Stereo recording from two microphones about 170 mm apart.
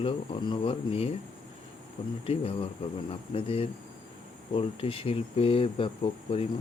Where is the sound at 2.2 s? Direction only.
35° left (ahead or behind).